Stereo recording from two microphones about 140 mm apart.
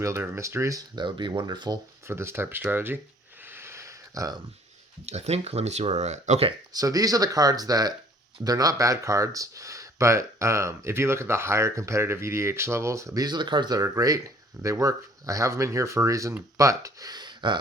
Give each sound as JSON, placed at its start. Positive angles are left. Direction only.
{"t": 0.0, "sound": "speech", "side_deg": -20}
{"t": 2.0, "sound": "speech", "side_deg": -20}
{"t": 3.4, "sound": "a sound", "side_deg": -15}
{"t": 5.0, "sound": "speech", "side_deg": -50}
{"t": 6.7, "sound": "speech", "side_deg": -25}